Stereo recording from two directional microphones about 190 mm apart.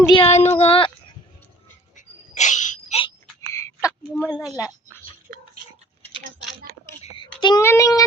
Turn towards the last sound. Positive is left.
turn(degrees=15)  # may be behind; listen again after turning